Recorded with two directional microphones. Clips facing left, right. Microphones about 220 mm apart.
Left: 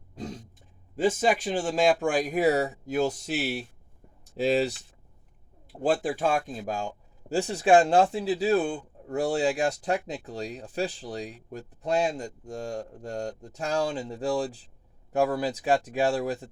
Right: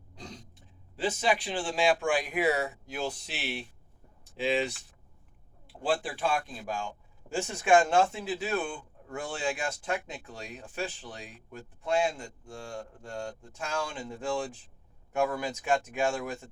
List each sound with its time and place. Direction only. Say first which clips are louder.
0.9 s speech: left 5 dB; 45° left (ahead or behind)
4.2 s a sound: left 5 dB; 40° left (ahead or behind)
5.8 s speech: left 5 dB; 45° left (ahead or behind)